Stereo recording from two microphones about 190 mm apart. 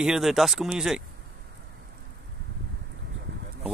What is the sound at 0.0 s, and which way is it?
Speech, centre (ahead or behind).